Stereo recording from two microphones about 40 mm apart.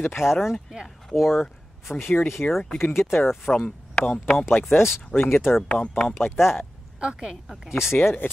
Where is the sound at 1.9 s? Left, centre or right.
Left.